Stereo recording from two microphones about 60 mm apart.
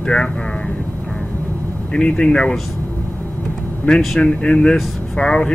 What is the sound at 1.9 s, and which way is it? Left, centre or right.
Speech, centre.